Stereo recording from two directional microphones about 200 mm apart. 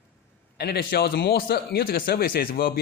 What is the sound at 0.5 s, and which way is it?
Speech, 50° left (ahead or behind).